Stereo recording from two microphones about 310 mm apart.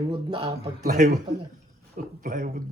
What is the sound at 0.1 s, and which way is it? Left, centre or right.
Speech, centre.